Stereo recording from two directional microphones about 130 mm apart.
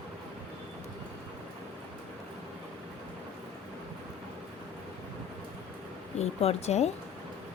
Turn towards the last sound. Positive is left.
turn(degrees=55)  # may be behind; listen again after turning